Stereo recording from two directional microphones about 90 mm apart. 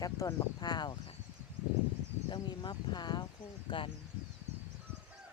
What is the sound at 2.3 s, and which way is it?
Speech, 55° left (ahead or behind).